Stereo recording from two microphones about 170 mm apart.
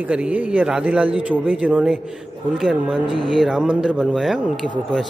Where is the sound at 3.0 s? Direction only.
30° right (ahead or behind).